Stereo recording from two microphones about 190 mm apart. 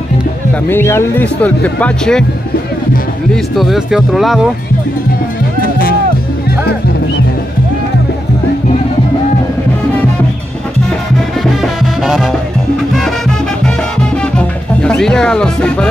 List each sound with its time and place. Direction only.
0.7 s speech: 10° left (ahead or behind)
3.5 s speech: centre (ahead or behind)
5.6 s music: 50° left (ahead or behind)
11.6 s music: centre (ahead or behind)
14.1 s music: 5° left (ahead or behind)